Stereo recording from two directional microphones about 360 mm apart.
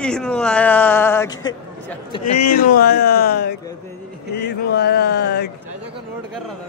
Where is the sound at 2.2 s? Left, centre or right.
Left.